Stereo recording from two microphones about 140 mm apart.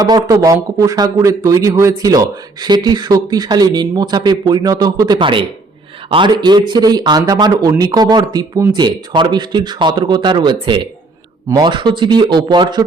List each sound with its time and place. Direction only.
0.0 s a man's voice: 25° right (ahead or behind)